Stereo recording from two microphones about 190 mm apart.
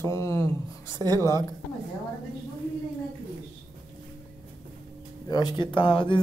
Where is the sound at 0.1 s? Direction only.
15° left (ahead or behind).